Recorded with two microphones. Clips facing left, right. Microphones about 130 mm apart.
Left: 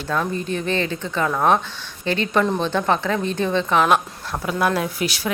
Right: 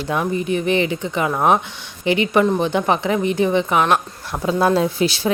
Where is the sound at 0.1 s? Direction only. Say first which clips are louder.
Right 3 dB; 15° right (ahead or behind).